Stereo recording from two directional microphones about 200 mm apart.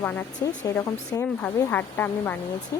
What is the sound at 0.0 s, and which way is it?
Speech, 10° left (ahead or behind).